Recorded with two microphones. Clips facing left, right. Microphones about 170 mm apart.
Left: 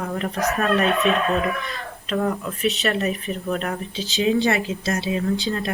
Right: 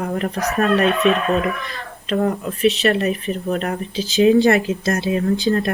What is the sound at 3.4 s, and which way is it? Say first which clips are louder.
Speech: right 3 dB; 35° right (ahead or behind).